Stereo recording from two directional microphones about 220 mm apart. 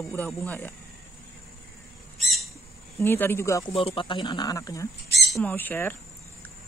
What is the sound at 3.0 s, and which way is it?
Speech, 10° left (ahead or behind).